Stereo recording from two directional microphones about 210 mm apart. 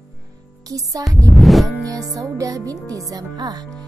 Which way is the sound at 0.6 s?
15° right (ahead or behind).